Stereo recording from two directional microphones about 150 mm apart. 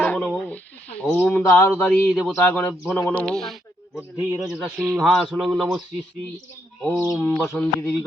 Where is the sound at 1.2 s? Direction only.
10° left (ahead or behind).